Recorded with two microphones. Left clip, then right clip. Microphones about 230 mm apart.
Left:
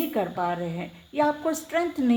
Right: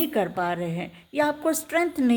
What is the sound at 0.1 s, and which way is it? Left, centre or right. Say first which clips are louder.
Speech: right 1 dB; right.